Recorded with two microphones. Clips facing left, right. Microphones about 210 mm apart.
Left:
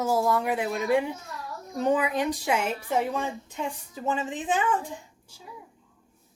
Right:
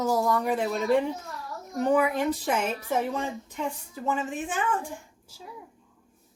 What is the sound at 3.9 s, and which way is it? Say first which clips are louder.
Speech: left 1 dB; 20° left (ahead or behind).